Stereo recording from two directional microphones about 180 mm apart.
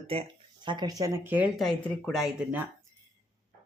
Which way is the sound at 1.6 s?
5° left (ahead or behind).